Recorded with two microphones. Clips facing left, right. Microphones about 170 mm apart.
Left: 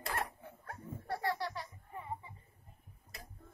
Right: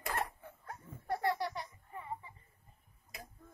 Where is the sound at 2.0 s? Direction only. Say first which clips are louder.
Even; 15° left (ahead or behind).